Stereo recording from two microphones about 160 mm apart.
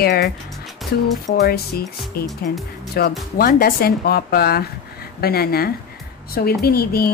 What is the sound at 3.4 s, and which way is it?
Speech, 65° left (ahead or behind).